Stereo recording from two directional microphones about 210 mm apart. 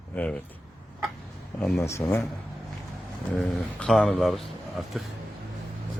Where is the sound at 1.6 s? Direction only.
5° left (ahead or behind).